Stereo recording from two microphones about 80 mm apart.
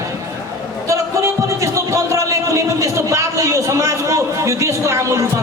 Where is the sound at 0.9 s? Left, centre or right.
Right.